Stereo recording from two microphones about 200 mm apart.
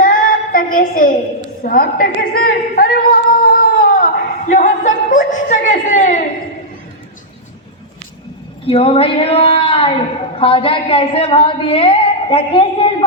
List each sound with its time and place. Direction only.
0.0 s child singing: 45° left (ahead or behind)
1.6 s a sound: 45° left (ahead or behind)
8.6 s a woman's voice: 30° left (ahead or behind)